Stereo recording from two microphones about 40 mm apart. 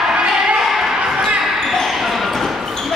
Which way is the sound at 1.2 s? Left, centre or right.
Centre.